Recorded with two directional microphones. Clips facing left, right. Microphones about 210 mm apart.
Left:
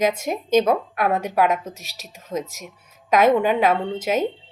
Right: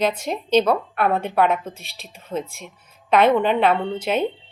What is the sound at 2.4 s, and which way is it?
Speech, 40° left (ahead or behind).